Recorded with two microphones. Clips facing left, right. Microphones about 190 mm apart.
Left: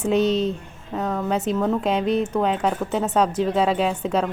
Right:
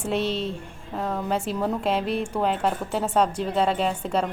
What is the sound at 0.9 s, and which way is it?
A woman's voice, centre (ahead or behind).